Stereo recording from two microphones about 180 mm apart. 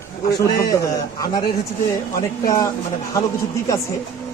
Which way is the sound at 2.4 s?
20° left (ahead or behind).